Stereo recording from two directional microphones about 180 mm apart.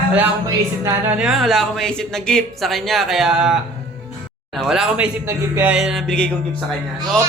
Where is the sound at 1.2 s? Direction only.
Centre (ahead or behind).